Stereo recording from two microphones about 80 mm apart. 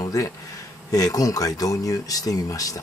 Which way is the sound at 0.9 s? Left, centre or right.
Left.